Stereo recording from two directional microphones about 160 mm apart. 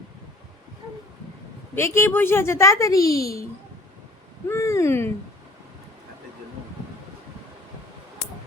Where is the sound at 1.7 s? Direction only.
15° left (ahead or behind).